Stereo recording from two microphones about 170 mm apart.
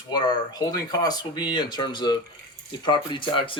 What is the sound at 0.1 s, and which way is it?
Speech, 25° left (ahead or behind).